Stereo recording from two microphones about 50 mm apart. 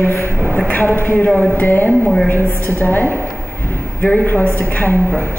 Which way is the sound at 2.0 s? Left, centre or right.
Centre.